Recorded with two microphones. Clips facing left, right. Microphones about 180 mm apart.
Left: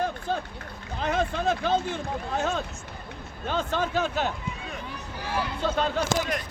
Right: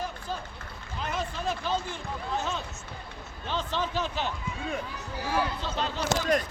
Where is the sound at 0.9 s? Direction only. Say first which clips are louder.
Left 7 dB; 55° left (ahead or behind).